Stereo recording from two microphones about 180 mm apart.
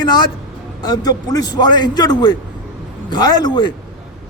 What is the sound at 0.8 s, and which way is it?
A man's voice, 20° left (ahead or behind).